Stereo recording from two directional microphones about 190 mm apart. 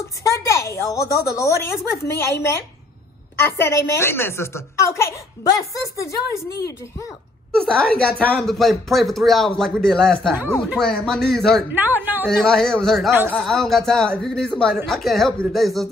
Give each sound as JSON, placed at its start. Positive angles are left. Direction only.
{"t": 0.2, "sound": "a woman's voice", "side_deg": 15}
{"t": 7.6, "sound": "speech", "side_deg": 5}
{"t": 12.0, "sound": "a woman's voice", "side_deg": -10}
{"t": 12.3, "sound": "speech", "side_deg": 0}
{"t": 13.1, "sound": "a woman's voice", "side_deg": -10}
{"t": 13.4, "sound": "speech", "side_deg": 0}